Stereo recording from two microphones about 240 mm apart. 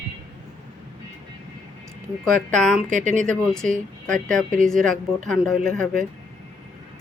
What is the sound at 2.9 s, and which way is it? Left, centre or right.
Speech, right.